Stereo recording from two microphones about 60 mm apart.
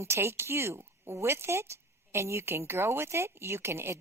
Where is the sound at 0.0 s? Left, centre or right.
Right.